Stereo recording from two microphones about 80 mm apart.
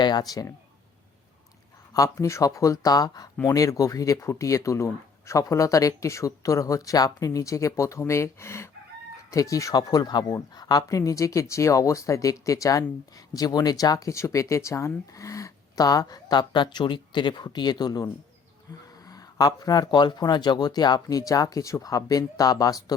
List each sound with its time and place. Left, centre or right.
0.0 s speech: left
1.9 s speech: left
14.1 s speech: left